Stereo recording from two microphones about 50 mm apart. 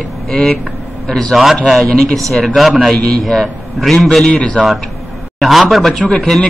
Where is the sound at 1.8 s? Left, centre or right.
Centre.